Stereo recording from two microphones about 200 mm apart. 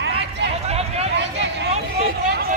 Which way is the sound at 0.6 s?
30° right (ahead or behind).